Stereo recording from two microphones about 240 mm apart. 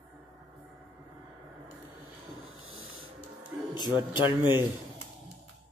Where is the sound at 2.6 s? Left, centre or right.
Right.